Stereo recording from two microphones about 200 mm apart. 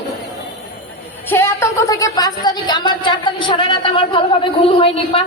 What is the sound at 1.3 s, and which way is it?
A woman's voice, 15° left (ahead or behind).